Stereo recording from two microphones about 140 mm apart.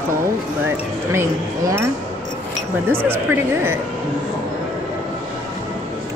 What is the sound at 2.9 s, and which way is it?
Speech, 15° right (ahead or behind).